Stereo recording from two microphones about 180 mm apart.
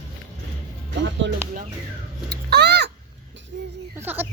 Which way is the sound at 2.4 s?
65° right (ahead or behind).